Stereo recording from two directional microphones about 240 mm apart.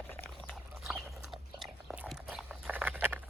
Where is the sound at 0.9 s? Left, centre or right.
Centre.